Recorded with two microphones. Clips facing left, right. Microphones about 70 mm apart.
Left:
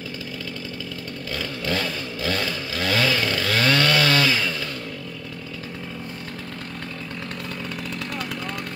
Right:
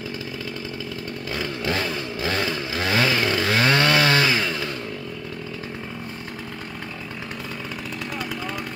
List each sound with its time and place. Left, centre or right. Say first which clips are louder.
1.3 s chainsaw: right 1 dB; right